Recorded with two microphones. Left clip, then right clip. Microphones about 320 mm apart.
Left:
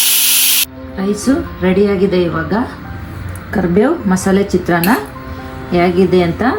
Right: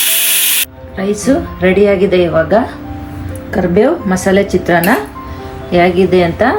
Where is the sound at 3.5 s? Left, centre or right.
Centre.